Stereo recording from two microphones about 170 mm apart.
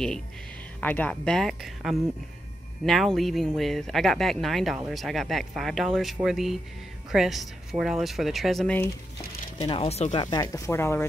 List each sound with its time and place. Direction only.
0.7 s speech: 10° left (ahead or behind)
9.6 s speech: 35° left (ahead or behind); by 11.1 s 15° left (ahead or behind)